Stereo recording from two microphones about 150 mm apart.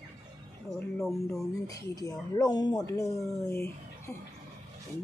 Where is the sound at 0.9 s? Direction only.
Centre (ahead or behind).